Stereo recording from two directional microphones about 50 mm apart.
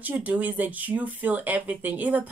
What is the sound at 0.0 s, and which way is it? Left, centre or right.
Speech, right.